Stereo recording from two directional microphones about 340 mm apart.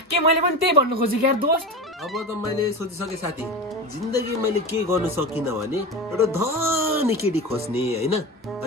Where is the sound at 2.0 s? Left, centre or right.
Centre.